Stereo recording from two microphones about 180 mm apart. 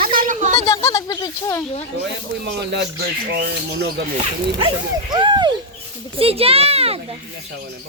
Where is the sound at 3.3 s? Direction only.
60° right (ahead or behind).